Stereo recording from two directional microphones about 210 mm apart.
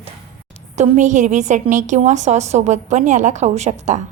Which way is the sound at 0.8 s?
35° right (ahead or behind).